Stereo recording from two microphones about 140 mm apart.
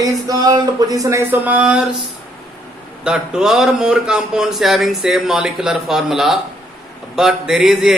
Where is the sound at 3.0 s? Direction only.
5° right (ahead or behind).